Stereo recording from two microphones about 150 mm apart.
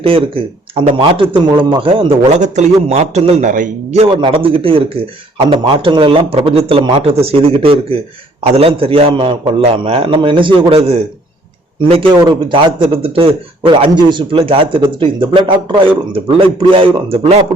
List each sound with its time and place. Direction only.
0.0 s a man's voice: 35° right (ahead or behind)
2.3 s a man's voice: 50° right (ahead or behind)
3.9 s a man's voice: 35° right (ahead or behind)